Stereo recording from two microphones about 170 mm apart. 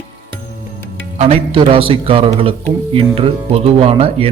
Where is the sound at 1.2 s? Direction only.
35° right (ahead or behind).